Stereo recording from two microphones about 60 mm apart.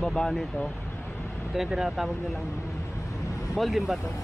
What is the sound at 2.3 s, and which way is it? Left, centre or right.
Vehicle, left.